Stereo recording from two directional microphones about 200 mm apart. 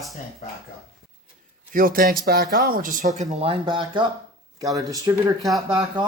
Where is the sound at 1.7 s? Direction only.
45° right (ahead or behind).